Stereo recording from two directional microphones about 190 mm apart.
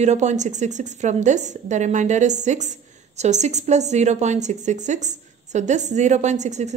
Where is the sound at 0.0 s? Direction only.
40° right (ahead or behind).